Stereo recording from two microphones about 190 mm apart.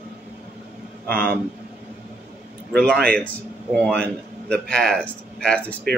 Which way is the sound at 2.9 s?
50° right (ahead or behind).